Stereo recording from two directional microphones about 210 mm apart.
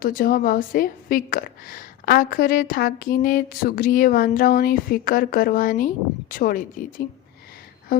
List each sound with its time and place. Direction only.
0.0 s a woman's voice: 45° left (ahead or behind)